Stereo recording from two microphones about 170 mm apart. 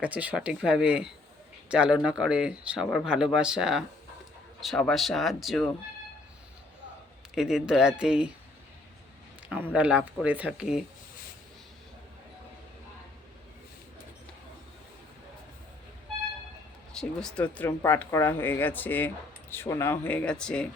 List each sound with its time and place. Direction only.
0.0 s speech: 10° right (ahead or behind)
7.3 s speech: 5° right (ahead or behind)
9.7 s speech: 10° right (ahead or behind)
16.9 s speech: 5° left (ahead or behind)